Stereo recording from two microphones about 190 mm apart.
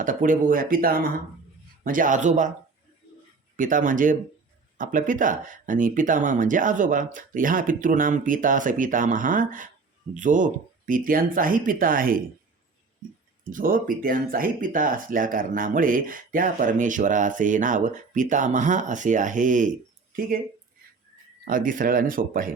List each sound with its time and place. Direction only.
0.0 s speech: 45° right (ahead or behind)
3.6 s speech: 45° right (ahead or behind)
13.5 s speech: 45° right (ahead or behind)
21.4 s speech: 45° right (ahead or behind)